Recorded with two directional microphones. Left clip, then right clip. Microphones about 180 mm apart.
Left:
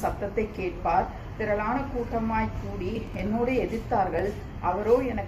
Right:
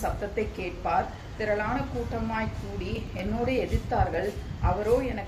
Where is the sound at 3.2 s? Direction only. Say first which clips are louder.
Left 2 dB; centre (ahead or behind).